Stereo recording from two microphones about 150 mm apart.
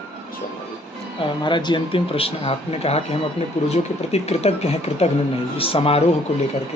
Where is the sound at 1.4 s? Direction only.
30° left (ahead or behind).